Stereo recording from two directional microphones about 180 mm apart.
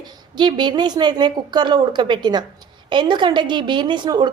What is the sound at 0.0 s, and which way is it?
A woman's voice, 25° right (ahead or behind).